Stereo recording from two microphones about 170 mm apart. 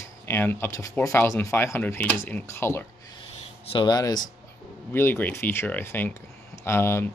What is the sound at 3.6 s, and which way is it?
Speech, 25° left (ahead or behind).